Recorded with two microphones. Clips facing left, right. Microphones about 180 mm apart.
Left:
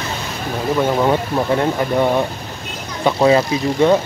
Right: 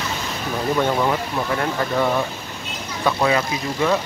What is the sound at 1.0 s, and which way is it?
Speech, 25° left (ahead or behind).